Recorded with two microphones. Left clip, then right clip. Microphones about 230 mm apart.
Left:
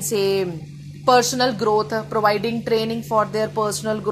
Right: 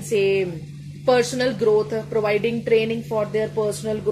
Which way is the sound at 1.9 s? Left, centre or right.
Left.